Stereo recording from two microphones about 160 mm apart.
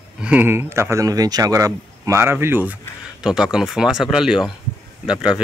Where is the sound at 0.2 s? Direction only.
10° right (ahead or behind).